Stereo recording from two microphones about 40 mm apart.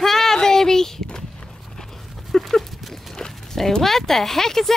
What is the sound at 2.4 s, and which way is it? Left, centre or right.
Dog, centre.